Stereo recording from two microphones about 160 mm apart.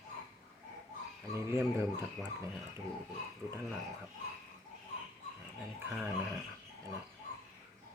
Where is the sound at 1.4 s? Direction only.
15° right (ahead or behind).